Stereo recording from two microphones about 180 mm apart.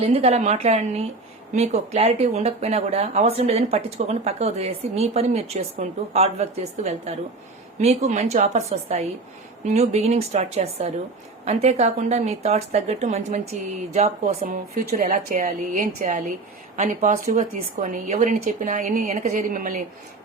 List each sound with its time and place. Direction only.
0.0 s speech: 35° right (ahead or behind)